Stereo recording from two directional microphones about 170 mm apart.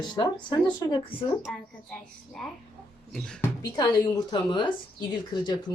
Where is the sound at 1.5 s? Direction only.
5° left (ahead or behind).